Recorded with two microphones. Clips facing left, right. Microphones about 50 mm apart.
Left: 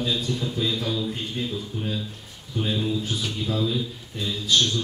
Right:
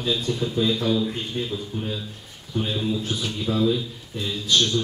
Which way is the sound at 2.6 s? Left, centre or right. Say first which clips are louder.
Even; centre.